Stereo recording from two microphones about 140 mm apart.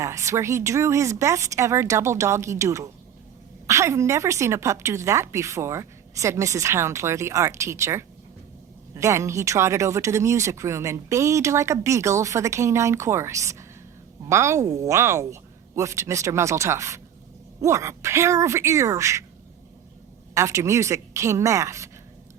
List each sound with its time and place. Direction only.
0.0 s speech: 20° right (ahead or behind)
20.3 s speech: 20° right (ahead or behind)